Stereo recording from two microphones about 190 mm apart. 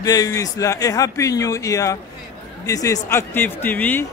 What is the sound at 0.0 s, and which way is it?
A man's voice, 20° left (ahead or behind).